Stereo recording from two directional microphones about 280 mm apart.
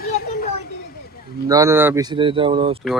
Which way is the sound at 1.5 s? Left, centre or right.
Centre.